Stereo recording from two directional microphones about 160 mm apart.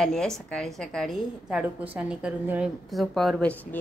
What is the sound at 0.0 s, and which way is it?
A woman's voice, 5° left (ahead or behind).